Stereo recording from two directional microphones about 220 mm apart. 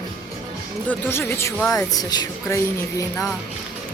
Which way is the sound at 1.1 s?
10° left (ahead or behind).